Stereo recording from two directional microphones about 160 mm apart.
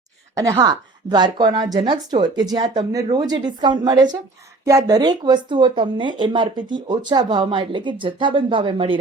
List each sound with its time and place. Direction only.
0.3 s speech: 25° right (ahead or behind)